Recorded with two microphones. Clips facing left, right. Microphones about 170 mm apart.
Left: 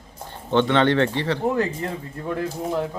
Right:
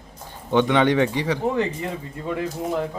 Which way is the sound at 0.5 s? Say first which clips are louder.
Even; 10° right (ahead or behind).